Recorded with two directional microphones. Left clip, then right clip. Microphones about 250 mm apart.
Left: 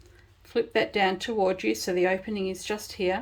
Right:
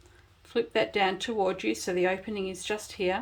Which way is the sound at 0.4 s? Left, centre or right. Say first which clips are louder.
Left 2 dB; centre.